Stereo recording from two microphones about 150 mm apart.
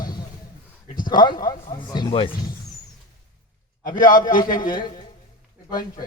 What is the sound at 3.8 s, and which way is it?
A man's voice, 30° left (ahead or behind).